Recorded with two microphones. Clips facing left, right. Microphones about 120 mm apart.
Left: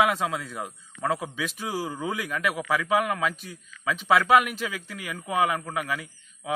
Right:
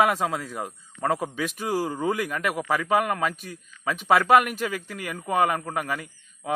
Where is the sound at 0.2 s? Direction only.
45° right (ahead or behind).